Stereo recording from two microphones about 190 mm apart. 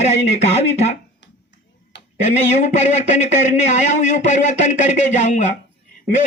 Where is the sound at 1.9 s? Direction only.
65° left (ahead or behind).